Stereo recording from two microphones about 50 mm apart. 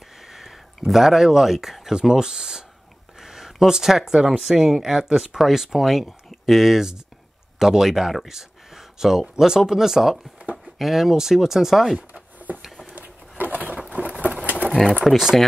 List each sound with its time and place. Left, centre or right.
0.3 s speech: centre
12.9 s a sound: right
13.8 s patter: right
15.0 s speech: centre